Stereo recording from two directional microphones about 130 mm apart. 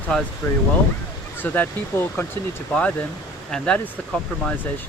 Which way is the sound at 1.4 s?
15° left (ahead or behind).